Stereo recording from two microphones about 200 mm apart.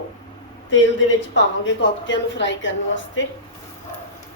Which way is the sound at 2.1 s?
65° left (ahead or behind).